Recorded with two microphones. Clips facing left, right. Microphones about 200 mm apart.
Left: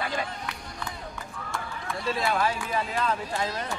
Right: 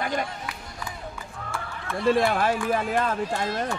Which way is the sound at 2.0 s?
55° right (ahead or behind).